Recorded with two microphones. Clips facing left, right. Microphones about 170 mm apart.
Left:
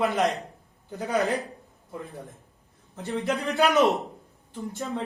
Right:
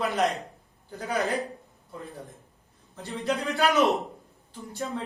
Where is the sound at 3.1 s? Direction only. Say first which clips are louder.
Left 1 dB; 15° left (ahead or behind).